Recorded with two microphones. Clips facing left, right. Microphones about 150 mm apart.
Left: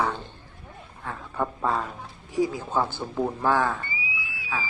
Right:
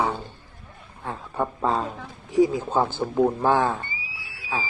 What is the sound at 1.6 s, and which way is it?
Speech, 25° right (ahead or behind).